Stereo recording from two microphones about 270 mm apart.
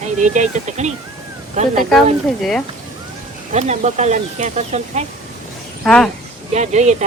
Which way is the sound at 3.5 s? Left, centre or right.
Right.